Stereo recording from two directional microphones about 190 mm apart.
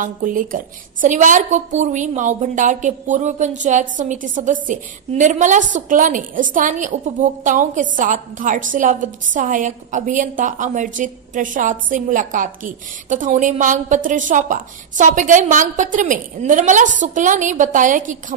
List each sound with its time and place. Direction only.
0.0 s a woman's voice: 45° right (ahead or behind)